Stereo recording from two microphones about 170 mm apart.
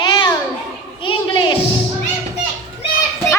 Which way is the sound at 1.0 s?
30° left (ahead or behind).